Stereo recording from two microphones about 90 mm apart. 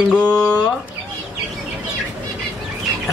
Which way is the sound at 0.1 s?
10° left (ahead or behind).